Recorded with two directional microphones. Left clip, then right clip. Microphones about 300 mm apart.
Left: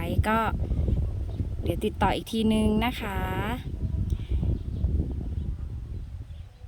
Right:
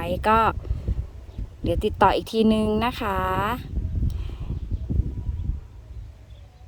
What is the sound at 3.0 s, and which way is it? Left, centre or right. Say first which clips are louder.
Speech: right 8 dB; right.